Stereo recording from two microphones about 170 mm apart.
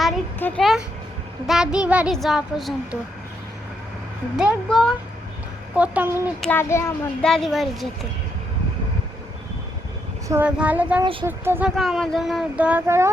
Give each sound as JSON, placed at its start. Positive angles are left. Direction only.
{"t": 0.3, "sound": "a child's voice", "side_deg": 10}
{"t": 1.5, "sound": "speech", "side_deg": -5}
{"t": 4.4, "sound": "speech", "side_deg": 0}
{"t": 6.4, "sound": "a child's voice", "side_deg": 10}
{"t": 7.2, "sound": "speech", "side_deg": 5}
{"t": 10.2, "sound": "speech", "side_deg": -10}
{"t": 11.0, "sound": "speech", "side_deg": -30}
{"t": 11.3, "sound": "speech", "side_deg": -10}
{"t": 11.8, "sound": "speech", "side_deg": 0}